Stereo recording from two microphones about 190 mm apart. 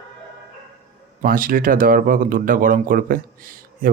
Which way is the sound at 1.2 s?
50° right (ahead or behind).